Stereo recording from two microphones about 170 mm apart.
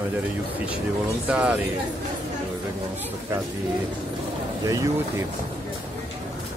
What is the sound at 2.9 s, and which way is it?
Speech, 10° right (ahead or behind).